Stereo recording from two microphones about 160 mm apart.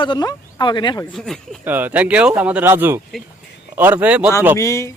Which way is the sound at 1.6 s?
10° right (ahead or behind).